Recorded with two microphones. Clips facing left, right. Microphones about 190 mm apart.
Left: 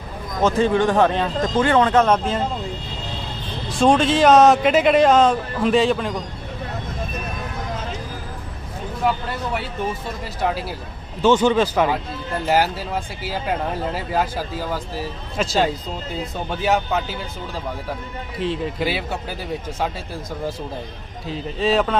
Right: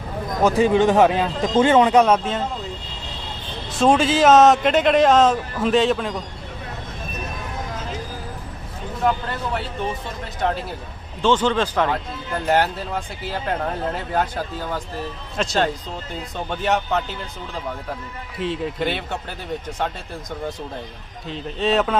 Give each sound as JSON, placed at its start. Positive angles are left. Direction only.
{"t": 0.4, "sound": "speech", "side_deg": -15}
{"t": 3.7, "sound": "speech", "side_deg": -5}
{"t": 9.0, "sound": "speech", "side_deg": 5}
{"t": 10.4, "sound": "speech", "side_deg": 5}
{"t": 18.3, "sound": "speech", "side_deg": 0}
{"t": 21.2, "sound": "speech", "side_deg": 5}